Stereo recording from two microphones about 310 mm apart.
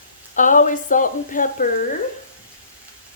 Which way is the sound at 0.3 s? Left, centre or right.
Left.